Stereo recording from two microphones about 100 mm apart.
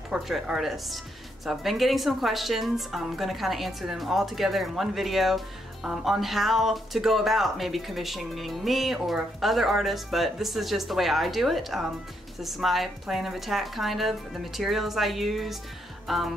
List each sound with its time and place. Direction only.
0.1 s speech: 5° right (ahead or behind)